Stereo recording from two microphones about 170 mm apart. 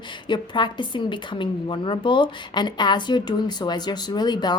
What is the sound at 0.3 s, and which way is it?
A woman's voice, 25° left (ahead or behind).